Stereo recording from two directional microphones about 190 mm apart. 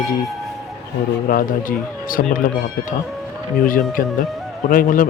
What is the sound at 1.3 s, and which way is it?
Speech, 50° left (ahead or behind).